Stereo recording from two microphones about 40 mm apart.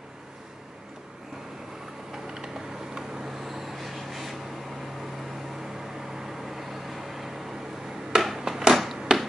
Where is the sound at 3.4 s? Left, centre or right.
Centre.